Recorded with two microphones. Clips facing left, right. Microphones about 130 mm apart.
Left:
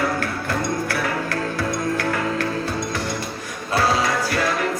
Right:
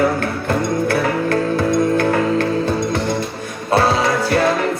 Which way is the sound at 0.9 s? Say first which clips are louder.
Right 7 dB; 25° right (ahead or behind).